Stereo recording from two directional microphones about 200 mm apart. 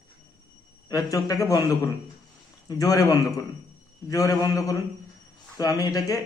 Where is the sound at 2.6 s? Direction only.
20° left (ahead or behind).